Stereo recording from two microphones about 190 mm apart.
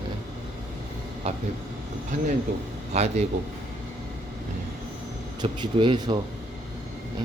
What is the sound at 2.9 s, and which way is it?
Speech, 35° right (ahead or behind).